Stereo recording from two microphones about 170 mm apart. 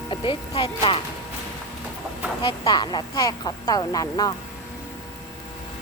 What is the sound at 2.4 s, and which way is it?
Speech, 25° left (ahead or behind).